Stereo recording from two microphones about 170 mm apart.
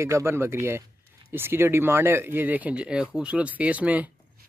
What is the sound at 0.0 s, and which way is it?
Speech, 15° right (ahead or behind).